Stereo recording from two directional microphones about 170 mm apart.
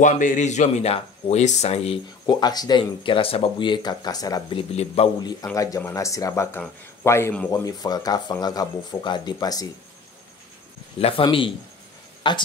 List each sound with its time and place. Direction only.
0.0 s speech: 50° left (ahead or behind)
2.2 s speech: 25° left (ahead or behind)
5.2 s speech: 20° left (ahead or behind)
11.0 s speech: 35° left (ahead or behind)